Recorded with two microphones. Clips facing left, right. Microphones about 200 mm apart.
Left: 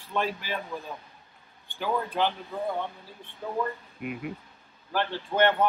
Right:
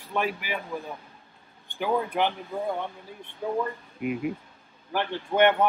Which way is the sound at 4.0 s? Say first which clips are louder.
Right 7 dB; centre (ahead or behind).